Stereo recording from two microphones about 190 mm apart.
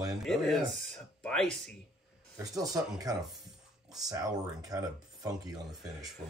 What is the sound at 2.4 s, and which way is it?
Speech, 20° right (ahead or behind).